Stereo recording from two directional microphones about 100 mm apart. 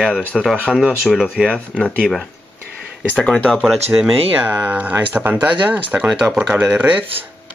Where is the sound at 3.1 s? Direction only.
10° left (ahead or behind).